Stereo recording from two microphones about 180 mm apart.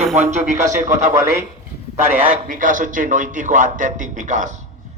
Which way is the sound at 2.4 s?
50° right (ahead or behind).